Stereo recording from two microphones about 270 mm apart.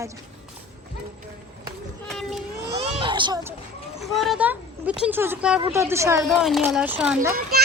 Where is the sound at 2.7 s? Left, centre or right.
Centre.